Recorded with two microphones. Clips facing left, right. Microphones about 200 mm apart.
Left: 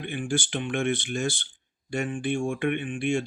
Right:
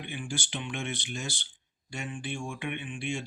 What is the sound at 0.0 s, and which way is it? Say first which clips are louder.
Speech: left 8 dB; 50° left (ahead or behind).